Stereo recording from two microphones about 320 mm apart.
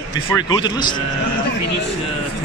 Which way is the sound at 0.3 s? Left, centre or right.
Centre.